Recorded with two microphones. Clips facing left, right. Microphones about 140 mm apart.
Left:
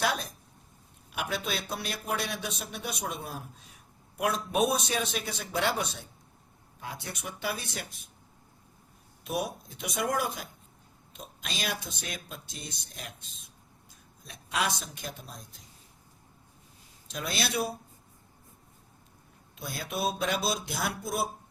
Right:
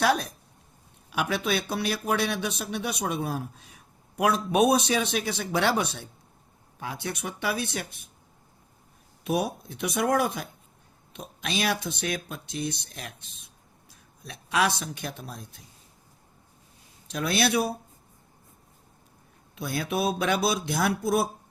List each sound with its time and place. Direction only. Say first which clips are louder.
1.1 s speech: right 6 dB; 75° right (ahead or behind)
4.2 s speech: right 5 dB; 70° right (ahead or behind)
9.2 s speech: right 5 dB; 65° right (ahead or behind)
14.3 s speech: right 6 dB; 80° right; by 15.4 s 65° right (ahead or behind)
17.2 s speech: right 8 dB; 65° right (ahead or behind)
19.5 s speech: right 6 dB; 70° right (ahead or behind)